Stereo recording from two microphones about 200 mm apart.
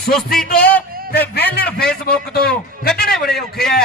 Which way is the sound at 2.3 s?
50° left (ahead or behind).